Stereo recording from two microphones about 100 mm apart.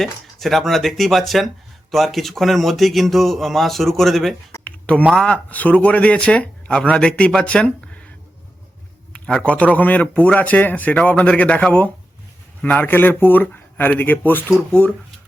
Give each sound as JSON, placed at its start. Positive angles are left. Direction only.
{"t": 0.0, "sound": "speech", "side_deg": 0}
{"t": 4.6, "sound": "a sound", "side_deg": 15}
{"t": 5.1, "sound": "speech", "side_deg": 10}
{"t": 9.1, "sound": "speech", "side_deg": 10}